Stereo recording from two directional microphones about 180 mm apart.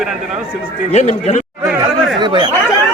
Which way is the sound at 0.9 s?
35° left (ahead or behind).